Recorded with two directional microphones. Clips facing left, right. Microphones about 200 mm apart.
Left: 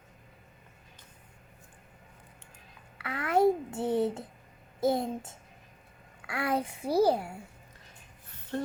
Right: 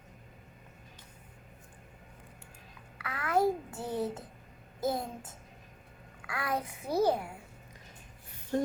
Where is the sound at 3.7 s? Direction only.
25° left (ahead or behind).